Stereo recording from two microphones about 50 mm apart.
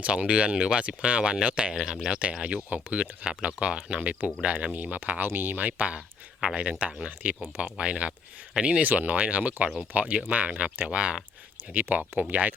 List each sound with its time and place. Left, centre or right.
0.0 s speech: right
1.7 s speech: centre; by 5.2 s right
5.2 s speech: right; by 8.8 s centre
8.8 s speech: right
11.7 s speech: right